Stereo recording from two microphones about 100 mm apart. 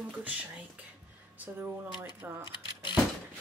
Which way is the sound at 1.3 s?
15° right (ahead or behind).